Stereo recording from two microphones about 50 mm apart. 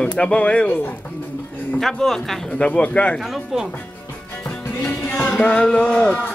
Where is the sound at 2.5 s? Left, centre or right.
Left.